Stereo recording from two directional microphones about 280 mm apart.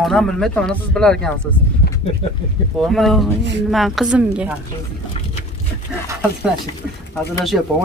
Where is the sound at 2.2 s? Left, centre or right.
Left.